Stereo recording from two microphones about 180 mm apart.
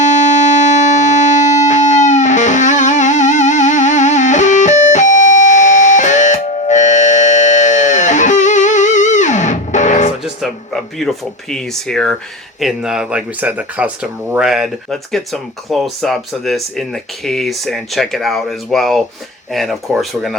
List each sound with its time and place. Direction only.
0.0 s music: 40° left (ahead or behind)
10.2 s speech: centre (ahead or behind)